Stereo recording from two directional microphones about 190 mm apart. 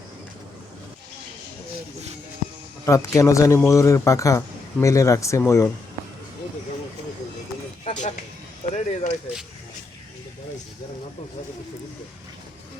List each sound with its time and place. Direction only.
2.8 s speech: 15° left (ahead or behind)
8.7 s speech: 40° left (ahead or behind)